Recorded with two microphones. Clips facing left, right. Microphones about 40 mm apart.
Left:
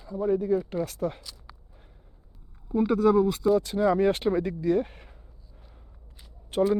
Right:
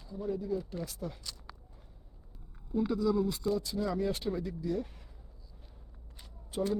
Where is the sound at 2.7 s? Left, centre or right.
Left.